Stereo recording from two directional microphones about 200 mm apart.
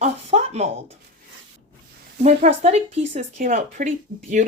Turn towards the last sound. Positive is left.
turn(degrees=-40)  # may be behind; listen again after turning